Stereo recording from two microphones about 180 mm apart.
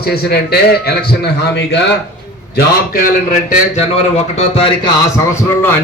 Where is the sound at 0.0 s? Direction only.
60° left (ahead or behind).